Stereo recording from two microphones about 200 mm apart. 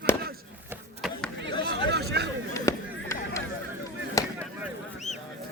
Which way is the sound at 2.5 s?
15° left (ahead or behind).